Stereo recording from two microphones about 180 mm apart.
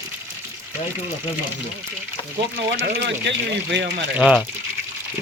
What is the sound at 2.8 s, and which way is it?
Speech, 75° right (ahead or behind).